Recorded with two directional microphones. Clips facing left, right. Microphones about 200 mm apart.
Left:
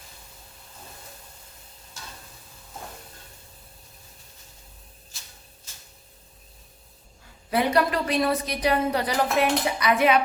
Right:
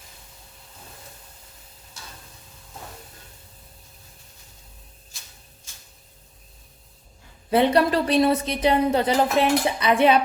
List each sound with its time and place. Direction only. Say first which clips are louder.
7.5 s a woman's voice: right 4 dB; 30° right (ahead or behind)